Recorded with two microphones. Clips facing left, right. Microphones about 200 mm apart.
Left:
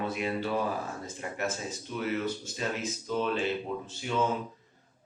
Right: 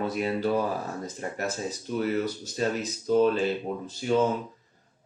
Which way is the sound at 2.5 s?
40° right (ahead or behind).